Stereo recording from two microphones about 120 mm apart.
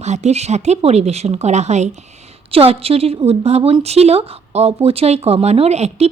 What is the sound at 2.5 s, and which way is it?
A woman's voice, 55° right (ahead or behind).